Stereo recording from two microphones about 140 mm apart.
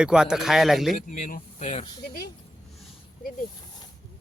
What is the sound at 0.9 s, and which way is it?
Speech, 70° left (ahead or behind).